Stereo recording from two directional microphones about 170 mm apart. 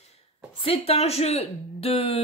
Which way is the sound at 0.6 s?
35° left (ahead or behind).